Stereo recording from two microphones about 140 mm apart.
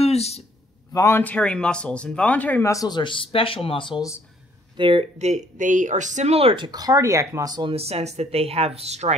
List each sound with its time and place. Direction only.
0.0 s a sound: 50° left (ahead or behind)
0.9 s speech: 20° left (ahead or behind)
2.7 s speech: 30° left (ahead or behind)
4.7 s speech: 35° right (ahead or behind)
5.2 s speech: 60° right (ahead or behind); by 7.7 s 30° right (ahead or behind)
7.7 s speech: 45° right (ahead or behind)